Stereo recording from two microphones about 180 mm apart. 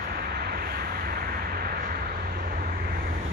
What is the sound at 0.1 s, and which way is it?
Vehicle, 60° right (ahead or behind).